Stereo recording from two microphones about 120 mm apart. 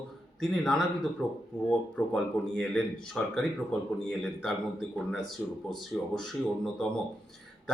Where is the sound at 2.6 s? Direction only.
5° left (ahead or behind).